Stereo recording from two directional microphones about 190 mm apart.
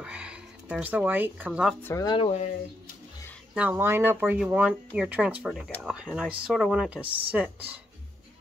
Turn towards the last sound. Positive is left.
turn(degrees=-10)  # may be behind; listen again after turning